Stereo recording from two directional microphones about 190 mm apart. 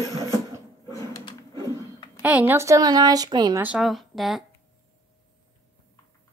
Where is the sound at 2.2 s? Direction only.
10° right (ahead or behind).